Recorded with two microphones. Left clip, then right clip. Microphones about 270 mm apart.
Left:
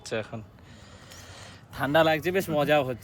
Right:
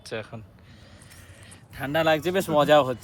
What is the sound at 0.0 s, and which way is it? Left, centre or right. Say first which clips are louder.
Speech: left 2 dB; centre.